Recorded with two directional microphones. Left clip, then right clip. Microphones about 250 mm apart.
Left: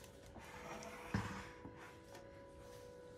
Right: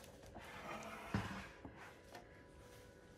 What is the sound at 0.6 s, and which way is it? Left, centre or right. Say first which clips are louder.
Music: right 1 dB; centre.